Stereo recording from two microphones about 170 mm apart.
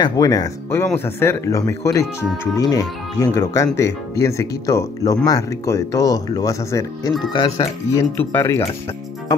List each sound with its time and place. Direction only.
0.0 s speech: 20° left (ahead or behind)